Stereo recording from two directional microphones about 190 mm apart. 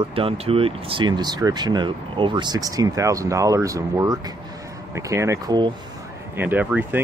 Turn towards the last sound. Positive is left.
turn(degrees=-10)  # may be behind; listen again after turning